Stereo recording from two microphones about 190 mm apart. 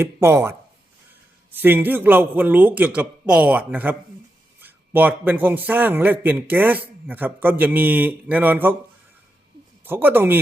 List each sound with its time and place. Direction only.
0.0 s a man's voice: 15° right (ahead or behind)
1.5 s a man's voice: 10° right (ahead or behind)
9.8 s a man's voice: 10° right (ahead or behind)